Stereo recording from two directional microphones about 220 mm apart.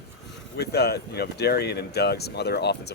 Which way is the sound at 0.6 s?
45° left (ahead or behind).